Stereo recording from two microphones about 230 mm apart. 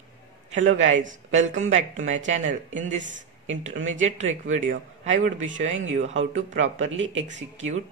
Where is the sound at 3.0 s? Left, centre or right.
Right.